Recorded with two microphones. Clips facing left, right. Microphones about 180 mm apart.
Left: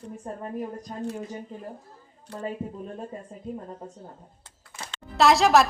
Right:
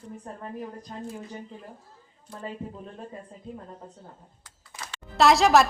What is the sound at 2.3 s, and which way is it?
Speech, 75° left (ahead or behind).